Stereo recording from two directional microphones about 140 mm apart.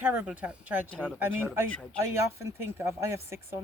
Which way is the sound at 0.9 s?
5° left (ahead or behind).